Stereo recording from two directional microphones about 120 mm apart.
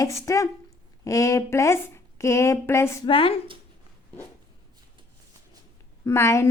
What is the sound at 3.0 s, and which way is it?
Speech, 45° left (ahead or behind).